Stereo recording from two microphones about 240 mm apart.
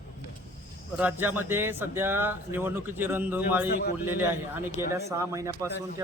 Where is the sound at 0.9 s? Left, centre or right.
Centre.